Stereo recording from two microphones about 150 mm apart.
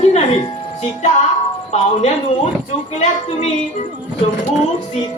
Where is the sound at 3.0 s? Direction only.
50° left (ahead or behind).